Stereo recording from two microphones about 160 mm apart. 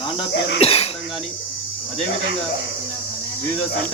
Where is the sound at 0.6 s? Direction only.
35° left (ahead or behind).